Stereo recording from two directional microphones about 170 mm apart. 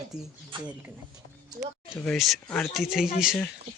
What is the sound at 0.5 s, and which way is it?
Speech, 30° right (ahead or behind).